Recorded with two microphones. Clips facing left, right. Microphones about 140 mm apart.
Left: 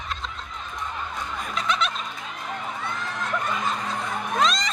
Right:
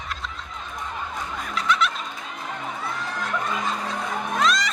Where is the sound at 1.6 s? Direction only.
20° left (ahead or behind).